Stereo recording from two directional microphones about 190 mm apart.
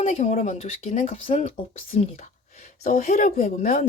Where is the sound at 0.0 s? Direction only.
35° left (ahead or behind).